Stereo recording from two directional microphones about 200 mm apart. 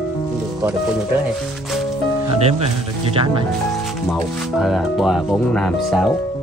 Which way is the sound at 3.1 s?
25° right (ahead or behind).